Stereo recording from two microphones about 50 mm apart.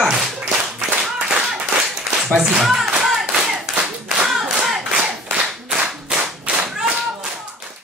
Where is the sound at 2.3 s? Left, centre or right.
Centre.